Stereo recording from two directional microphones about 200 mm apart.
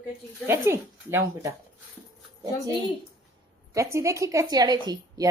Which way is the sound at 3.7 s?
15° right (ahead or behind).